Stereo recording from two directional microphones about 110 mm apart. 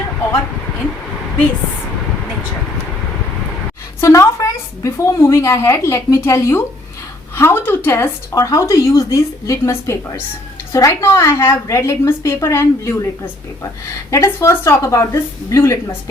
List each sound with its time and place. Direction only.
4.0 s speech: 25° left (ahead or behind)